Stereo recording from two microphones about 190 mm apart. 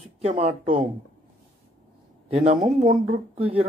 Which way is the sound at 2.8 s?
35° right (ahead or behind).